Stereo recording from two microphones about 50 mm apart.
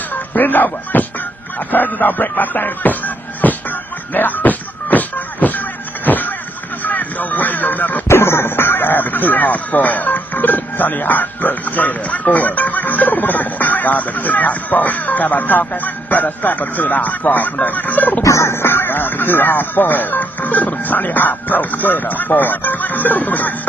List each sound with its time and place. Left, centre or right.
0.1 s a sound: left
1.7 s music: left
6.0 s vehicle: left
6.8 s a sound: left
8.1 s speech: left
18.2 s music: left
18.7 s music: left